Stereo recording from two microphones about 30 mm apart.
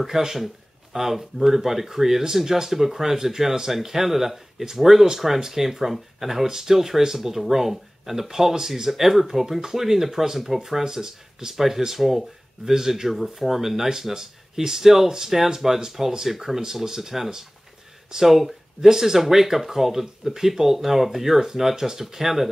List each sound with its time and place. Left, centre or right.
0.0 s speech: centre